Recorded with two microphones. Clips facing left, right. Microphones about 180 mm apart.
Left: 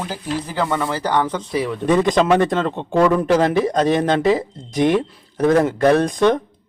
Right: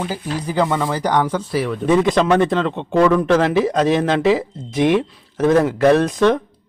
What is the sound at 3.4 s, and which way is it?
Speech, 5° right (ahead or behind).